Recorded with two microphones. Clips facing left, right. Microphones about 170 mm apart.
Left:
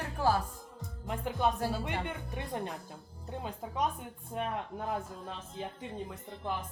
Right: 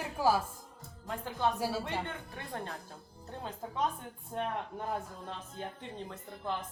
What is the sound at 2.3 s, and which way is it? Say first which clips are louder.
Speech: left 6 dB; 15° left (ahead or behind).